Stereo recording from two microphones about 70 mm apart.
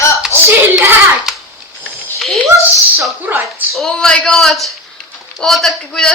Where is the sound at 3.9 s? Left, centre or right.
Centre.